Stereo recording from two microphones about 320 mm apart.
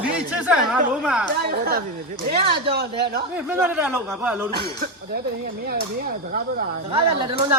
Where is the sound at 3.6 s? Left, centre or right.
Centre.